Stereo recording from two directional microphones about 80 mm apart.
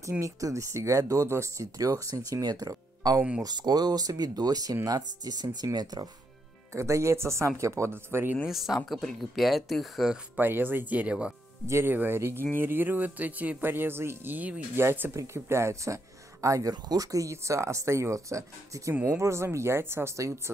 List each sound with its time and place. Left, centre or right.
0.2 s speech: right
6.7 s speech: right
8.5 s speech: centre
10.3 s speech: right
11.6 s speech: right
16.7 s speech: right